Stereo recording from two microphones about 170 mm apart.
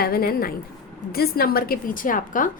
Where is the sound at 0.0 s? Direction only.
60° left (ahead or behind).